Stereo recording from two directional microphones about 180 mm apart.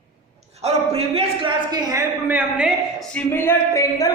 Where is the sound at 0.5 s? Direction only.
35° right (ahead or behind); by 3.1 s 5° right (ahead or behind).